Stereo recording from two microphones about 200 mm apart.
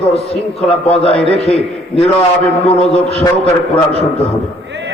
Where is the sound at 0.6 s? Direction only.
30° left (ahead or behind).